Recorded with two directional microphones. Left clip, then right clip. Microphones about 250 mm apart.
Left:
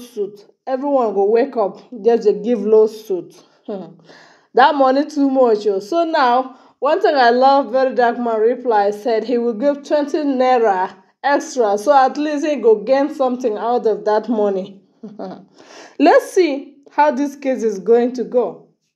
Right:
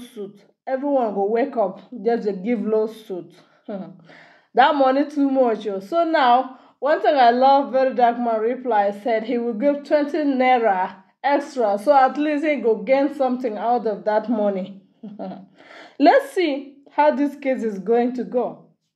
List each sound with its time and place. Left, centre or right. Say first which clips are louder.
0.7 s a woman's voice: left 4 dB; centre
4.9 s speech: left 3 dB; centre
5.3 s a woman's voice: left 8 dB; centre